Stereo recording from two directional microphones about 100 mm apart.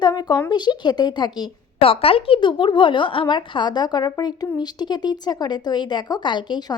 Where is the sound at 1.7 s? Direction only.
70° left (ahead or behind).